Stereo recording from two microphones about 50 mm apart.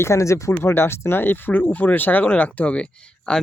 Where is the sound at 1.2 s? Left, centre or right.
Left; by 3.4 s centre.